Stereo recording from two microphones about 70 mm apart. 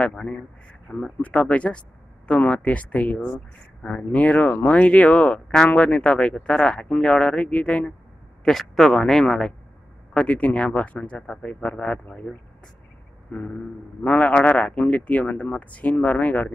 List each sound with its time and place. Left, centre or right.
0.0 s speech: centre
8.5 s speech: centre
10.1 s speech: centre
13.3 s speech: left